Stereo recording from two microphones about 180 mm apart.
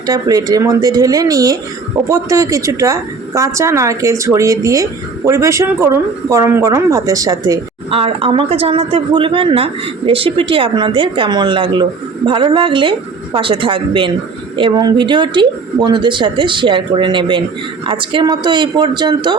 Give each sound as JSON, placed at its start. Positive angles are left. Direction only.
{"t": 0.0, "sound": "a woman's voice", "side_deg": -20}
{"t": 7.9, "sound": "a woman's voice", "side_deg": -30}